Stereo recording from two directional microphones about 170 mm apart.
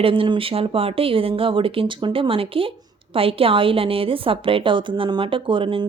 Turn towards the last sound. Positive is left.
turn(degrees=-30)  # may be behind; listen again after turning